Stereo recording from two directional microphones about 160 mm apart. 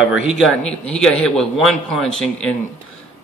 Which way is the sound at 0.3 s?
5° left (ahead or behind).